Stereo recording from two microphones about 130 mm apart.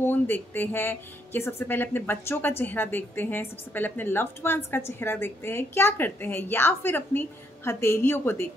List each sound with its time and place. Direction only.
0.0 s a woman's voice: 15° left (ahead or behind)